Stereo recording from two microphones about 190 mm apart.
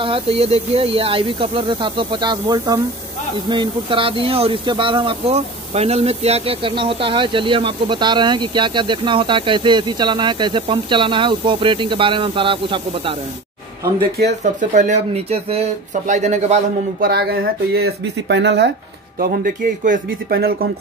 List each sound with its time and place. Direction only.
0.0 s speech: 30° right (ahead or behind)
14.1 s speech: 55° right (ahead or behind)
14.7 s speech: 40° right (ahead or behind)
17.0 s speech: 55° right (ahead or behind)
19.1 s speech: 50° right (ahead or behind)